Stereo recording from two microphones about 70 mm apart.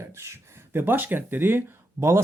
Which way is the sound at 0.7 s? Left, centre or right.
Right.